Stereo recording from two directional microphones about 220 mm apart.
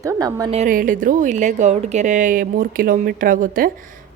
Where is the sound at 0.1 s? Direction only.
15° right (ahead or behind).